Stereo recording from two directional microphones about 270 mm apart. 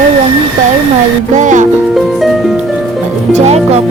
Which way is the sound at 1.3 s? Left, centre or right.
Right.